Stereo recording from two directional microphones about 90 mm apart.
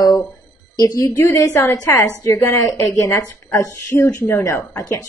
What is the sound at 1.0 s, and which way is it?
A woman's voice, 30° left (ahead or behind).